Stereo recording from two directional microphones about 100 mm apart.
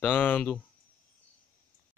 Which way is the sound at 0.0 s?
15° left (ahead or behind).